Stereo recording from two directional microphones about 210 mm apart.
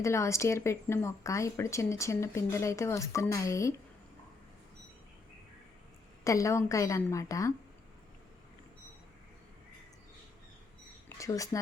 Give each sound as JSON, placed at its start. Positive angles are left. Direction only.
{"t": 0.0, "sound": "a woman's voice", "side_deg": 15}
{"t": 6.2, "sound": "a woman's voice", "side_deg": 15}
{"t": 11.2, "sound": "a woman's voice", "side_deg": 15}